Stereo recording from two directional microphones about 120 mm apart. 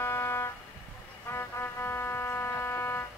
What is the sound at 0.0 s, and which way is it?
Music, 20° left (ahead or behind).